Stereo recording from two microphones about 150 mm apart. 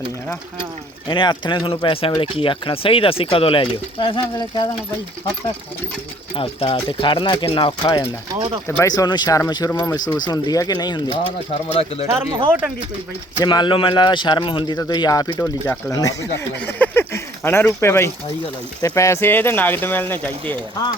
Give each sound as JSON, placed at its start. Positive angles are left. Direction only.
{"t": 1.0, "sound": "speech", "side_deg": 30}
{"t": 6.3, "sound": "speech", "side_deg": 40}
{"t": 8.6, "sound": "speech", "side_deg": 15}
{"t": 11.7, "sound": "speech", "side_deg": 40}
{"t": 12.5, "sound": "speech", "side_deg": -10}
{"t": 13.4, "sound": "speech", "side_deg": 30}
{"t": 16.6, "sound": "a sound", "side_deg": 10}
{"t": 18.8, "sound": "speech", "side_deg": 20}